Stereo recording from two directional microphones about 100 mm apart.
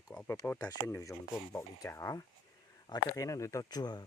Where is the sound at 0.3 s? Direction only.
20° left (ahead or behind).